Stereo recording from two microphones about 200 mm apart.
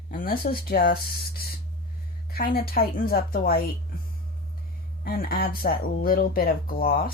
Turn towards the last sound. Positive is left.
turn(degrees=45)  # may be behind; listen again after turning